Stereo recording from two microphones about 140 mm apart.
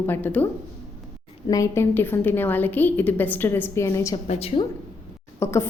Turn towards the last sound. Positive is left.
turn(degrees=20)  # may be behind; listen again after turning